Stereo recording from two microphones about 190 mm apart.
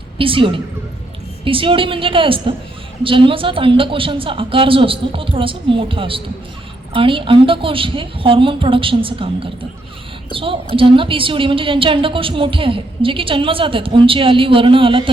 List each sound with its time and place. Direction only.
0.2 s a woman's voice: 30° right (ahead or behind)